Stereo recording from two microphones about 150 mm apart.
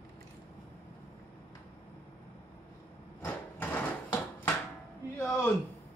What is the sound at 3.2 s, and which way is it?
Vehicle, 10° left (ahead or behind).